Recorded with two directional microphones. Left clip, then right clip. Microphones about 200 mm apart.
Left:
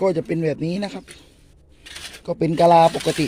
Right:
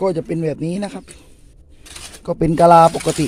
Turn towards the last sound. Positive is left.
turn(degrees=-15)  # may be behind; listen again after turning